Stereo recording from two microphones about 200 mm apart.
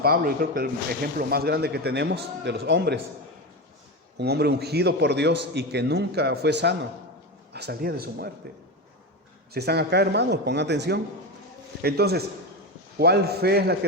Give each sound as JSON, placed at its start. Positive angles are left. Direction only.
{"t": 0.0, "sound": "speech", "side_deg": -50}
{"t": 4.2, "sound": "a man's voice", "side_deg": -55}
{"t": 9.5, "sound": "a man's voice", "side_deg": -55}